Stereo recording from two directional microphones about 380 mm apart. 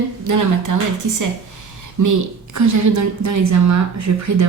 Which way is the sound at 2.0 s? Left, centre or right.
Right.